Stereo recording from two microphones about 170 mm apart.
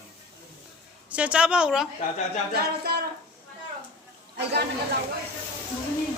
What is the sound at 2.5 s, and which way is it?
Speech, 65° right (ahead or behind).